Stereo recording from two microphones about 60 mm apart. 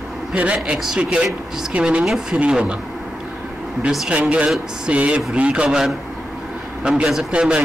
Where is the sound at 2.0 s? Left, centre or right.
Centre.